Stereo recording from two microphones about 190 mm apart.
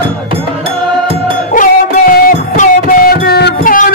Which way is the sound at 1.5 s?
45° left (ahead or behind).